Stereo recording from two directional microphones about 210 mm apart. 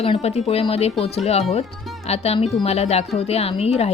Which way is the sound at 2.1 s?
30° left (ahead or behind).